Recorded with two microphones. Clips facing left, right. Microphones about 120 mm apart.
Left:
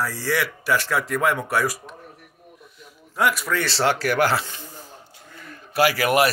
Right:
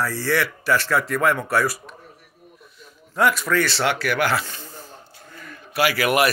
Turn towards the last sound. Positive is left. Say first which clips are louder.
# left 1 dB
turn(degrees=35)  # may be behind; listen again after turning